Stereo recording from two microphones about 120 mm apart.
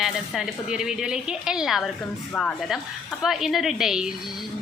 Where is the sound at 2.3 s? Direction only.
10° left (ahead or behind).